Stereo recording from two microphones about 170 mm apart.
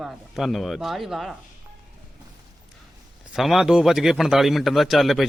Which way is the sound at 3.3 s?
Centre (ahead or behind).